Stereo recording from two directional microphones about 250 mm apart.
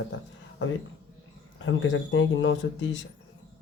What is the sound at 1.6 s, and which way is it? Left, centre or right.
Speech, left.